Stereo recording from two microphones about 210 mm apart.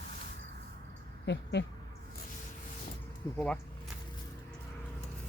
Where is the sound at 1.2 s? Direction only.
55° left (ahead or behind).